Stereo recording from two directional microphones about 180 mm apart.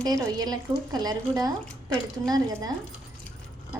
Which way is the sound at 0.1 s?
20° right (ahead or behind).